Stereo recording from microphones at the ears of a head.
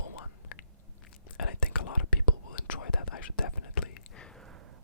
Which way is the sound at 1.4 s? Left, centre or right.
Left.